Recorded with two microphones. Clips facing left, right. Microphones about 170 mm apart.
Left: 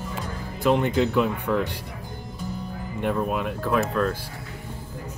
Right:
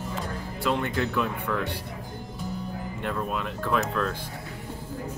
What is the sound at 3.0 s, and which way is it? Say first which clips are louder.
Speech: left 6 dB; 15° left (ahead or behind).